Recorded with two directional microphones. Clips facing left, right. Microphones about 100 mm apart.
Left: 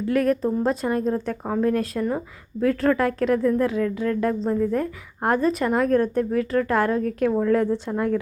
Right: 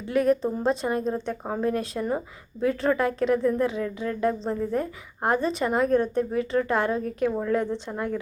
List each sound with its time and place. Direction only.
0.1 s a woman's voice: 5° right (ahead or behind)
5.9 s a woman's voice: 15° right (ahead or behind)
6.6 s a woman's voice: 5° right (ahead or behind)